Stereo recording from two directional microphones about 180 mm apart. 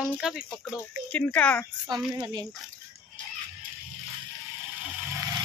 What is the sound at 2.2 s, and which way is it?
Speech, 25° right (ahead or behind).